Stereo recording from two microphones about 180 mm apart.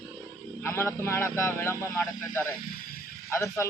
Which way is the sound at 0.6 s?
15° left (ahead or behind).